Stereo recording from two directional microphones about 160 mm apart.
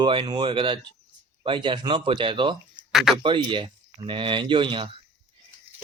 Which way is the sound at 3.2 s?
30° right (ahead or behind).